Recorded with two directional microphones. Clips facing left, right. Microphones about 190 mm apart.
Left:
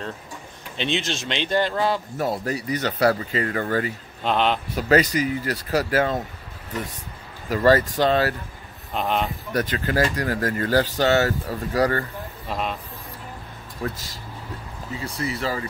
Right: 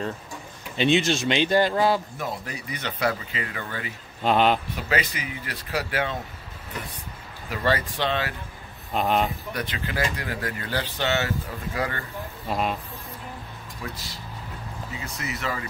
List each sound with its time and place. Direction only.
0.7 s speech: 5° right (ahead or behind)
2.1 s speech: 40° left (ahead or behind)
4.2 s speech: 5° right (ahead or behind)
4.7 s speech: 40° left (ahead or behind)
7.4 s speech: 40° left (ahead or behind)
8.9 s speech: centre (ahead or behind)
9.5 s speech: 45° left (ahead or behind)
12.4 s speech: 5° right (ahead or behind)
13.8 s speech: 45° left (ahead or behind)
15.0 s speech: 30° left (ahead or behind)